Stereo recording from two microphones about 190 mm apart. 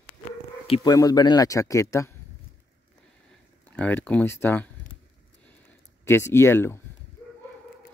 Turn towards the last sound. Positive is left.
turn(degrees=15)  # may be behind; listen again after turning